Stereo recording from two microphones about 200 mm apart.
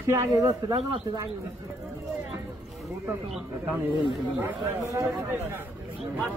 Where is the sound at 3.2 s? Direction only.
Centre (ahead or behind).